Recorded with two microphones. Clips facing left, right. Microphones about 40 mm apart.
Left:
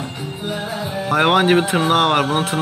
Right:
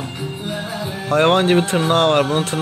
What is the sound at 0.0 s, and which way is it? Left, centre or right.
Speech, centre.